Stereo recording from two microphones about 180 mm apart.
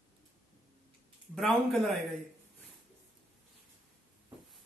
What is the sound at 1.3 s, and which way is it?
Speech, centre (ahead or behind).